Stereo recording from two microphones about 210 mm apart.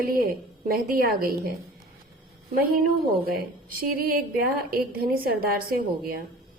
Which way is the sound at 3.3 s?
45° right (ahead or behind).